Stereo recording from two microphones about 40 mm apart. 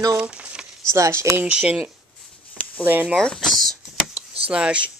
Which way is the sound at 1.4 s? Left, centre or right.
Right.